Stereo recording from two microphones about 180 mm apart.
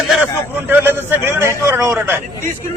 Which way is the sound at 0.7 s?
10° right (ahead or behind).